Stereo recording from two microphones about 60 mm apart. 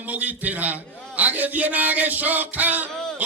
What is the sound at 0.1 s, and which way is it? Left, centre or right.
A man's voice, right.